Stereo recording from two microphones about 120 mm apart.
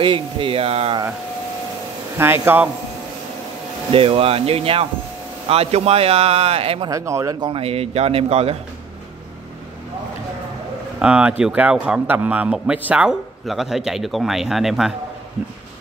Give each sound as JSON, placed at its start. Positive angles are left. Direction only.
{"t": 0.0, "sound": "speech", "side_deg": -45}
{"t": 2.1, "sound": "speech", "side_deg": -20}
{"t": 3.9, "sound": "speech", "side_deg": -50}
{"t": 6.9, "sound": "speech", "side_deg": -25}
{"t": 7.3, "sound": "speech", "side_deg": -40}
{"t": 7.6, "sound": "speech", "side_deg": -60}
{"t": 11.0, "sound": "a man's voice", "side_deg": -10}